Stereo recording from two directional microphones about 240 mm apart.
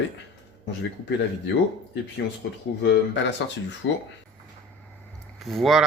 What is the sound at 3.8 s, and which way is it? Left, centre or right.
Speech, left.